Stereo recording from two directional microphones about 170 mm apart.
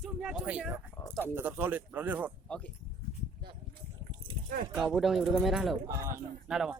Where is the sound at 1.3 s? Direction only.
10° right (ahead or behind).